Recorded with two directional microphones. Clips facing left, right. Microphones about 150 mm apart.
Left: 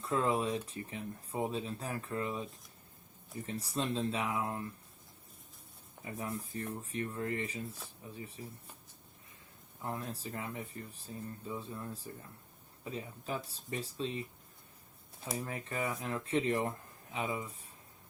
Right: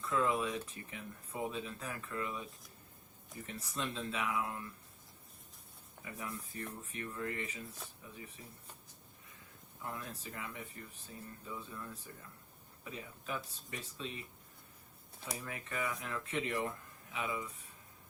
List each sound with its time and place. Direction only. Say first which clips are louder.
0.0 s speech: left 2 dB; 30° left (ahead or behind)
6.1 s speech: left 5 dB; 30° left (ahead or behind)
9.8 s speech: left 5 dB; 35° left (ahead or behind)
15.3 s speech: left 4 dB; 30° left (ahead or behind)